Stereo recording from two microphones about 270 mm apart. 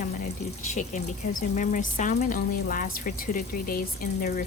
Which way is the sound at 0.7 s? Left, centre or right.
Left.